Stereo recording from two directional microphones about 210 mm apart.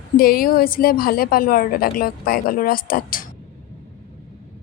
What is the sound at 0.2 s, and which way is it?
A woman's voice, 45° left (ahead or behind).